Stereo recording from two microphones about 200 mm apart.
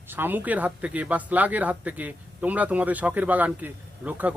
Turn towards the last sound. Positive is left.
turn(degrees=-10)  # may be behind; listen again after turning